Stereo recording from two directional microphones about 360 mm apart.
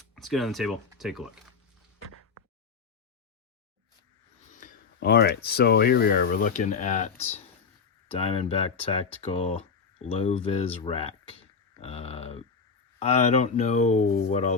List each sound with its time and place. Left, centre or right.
0.2 s speech: centre
4.5 s speech: left